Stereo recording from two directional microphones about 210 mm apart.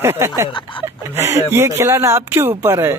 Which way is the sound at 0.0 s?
10° right (ahead or behind).